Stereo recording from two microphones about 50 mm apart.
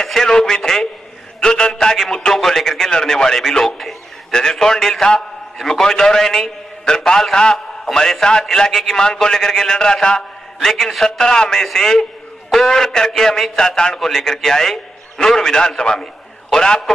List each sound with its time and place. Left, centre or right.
0.0 s a man's voice: centre